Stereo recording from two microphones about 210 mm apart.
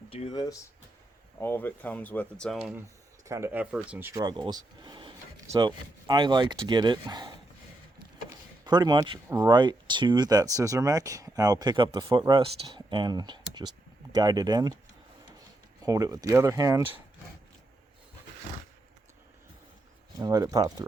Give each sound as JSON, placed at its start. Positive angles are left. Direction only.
{"t": 0.1, "sound": "speech", "side_deg": 25}
{"t": 3.2, "sound": "speech", "side_deg": -15}
{"t": 8.6, "sound": "speech", "side_deg": -20}
{"t": 15.8, "sound": "speech", "side_deg": -15}
{"t": 20.1, "sound": "speech", "side_deg": -15}